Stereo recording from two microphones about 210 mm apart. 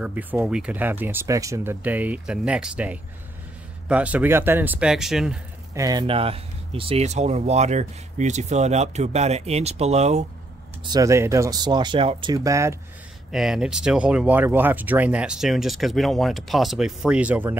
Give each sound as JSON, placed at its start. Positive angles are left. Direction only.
{"t": 0.0, "sound": "speech", "side_deg": -10}
{"t": 5.8, "sound": "speech", "side_deg": -20}
{"t": 10.9, "sound": "speech", "side_deg": -15}
{"t": 13.3, "sound": "speech", "side_deg": 0}